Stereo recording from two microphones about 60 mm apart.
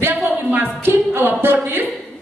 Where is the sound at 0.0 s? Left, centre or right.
Right.